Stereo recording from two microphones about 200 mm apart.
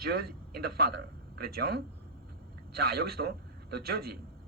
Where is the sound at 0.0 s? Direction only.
50° right (ahead or behind).